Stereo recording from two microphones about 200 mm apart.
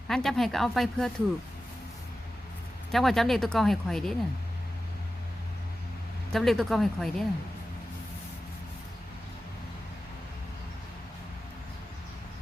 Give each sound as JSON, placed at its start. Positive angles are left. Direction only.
{"t": 0.1, "sound": "speech", "side_deg": 0}
{"t": 2.9, "sound": "speech", "side_deg": 0}
{"t": 6.3, "sound": "speech", "side_deg": 0}